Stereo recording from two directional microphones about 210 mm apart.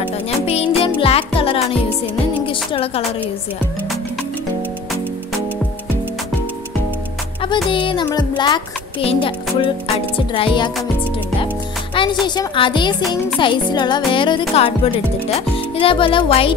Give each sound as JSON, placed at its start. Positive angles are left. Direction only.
{"t": 0.5, "sound": "music", "side_deg": 30}
{"t": 2.4, "sound": "speech", "side_deg": 25}
{"t": 7.7, "sound": "speech", "side_deg": 25}
{"t": 11.9, "sound": "speech", "side_deg": 20}